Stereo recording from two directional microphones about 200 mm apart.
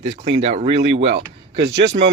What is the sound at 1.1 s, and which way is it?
Speech, 55° right (ahead or behind).